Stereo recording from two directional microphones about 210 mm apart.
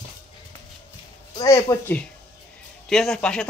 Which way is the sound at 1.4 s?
15° left (ahead or behind).